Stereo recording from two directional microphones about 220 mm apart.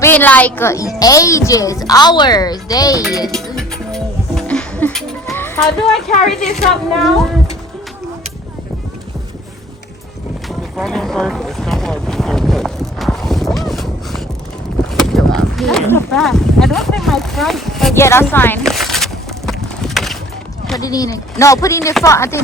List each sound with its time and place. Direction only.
0.0 s speech: 10° left (ahead or behind)
3.2 s music: centre (ahead or behind)
5.3 s a woman's voice: 10° left (ahead or behind)
10.8 s boat: centre (ahead or behind)
13.6 s a sound: centre (ahead or behind)
14.9 s speech: centre (ahead or behind)
17.9 s a sound: 10° left (ahead or behind)
20.7 s speech: 15° left (ahead or behind)